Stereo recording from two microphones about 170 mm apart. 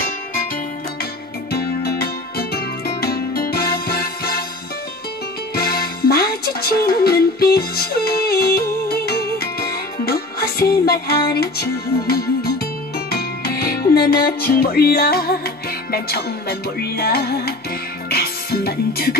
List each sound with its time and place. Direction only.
1.5 s music: 65° left (ahead or behind)
5.5 s music: 65° left (ahead or behind)